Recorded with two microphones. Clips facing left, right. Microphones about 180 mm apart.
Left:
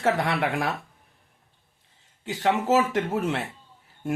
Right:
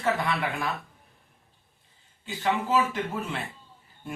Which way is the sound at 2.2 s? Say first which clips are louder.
Left 4 dB; 80° left.